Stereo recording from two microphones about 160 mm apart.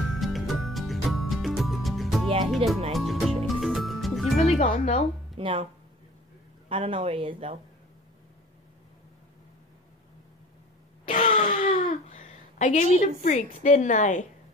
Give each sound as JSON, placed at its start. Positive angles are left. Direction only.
{"t": 0.2, "sound": "music", "side_deg": 0}
{"t": 2.5, "sound": "speech", "side_deg": 0}
{"t": 2.9, "sound": "music", "side_deg": 0}
{"t": 4.6, "sound": "a woman's voice", "side_deg": 45}
{"t": 5.4, "sound": "speech", "side_deg": -35}
{"t": 6.7, "sound": "speech", "side_deg": -35}
{"t": 11.1, "sound": "a sound", "side_deg": 45}
{"t": 13.0, "sound": "a woman's voice", "side_deg": 50}